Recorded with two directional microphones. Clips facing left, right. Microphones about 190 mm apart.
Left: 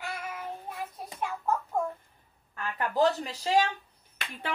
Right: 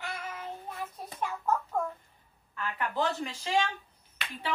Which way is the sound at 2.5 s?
40° left (ahead or behind).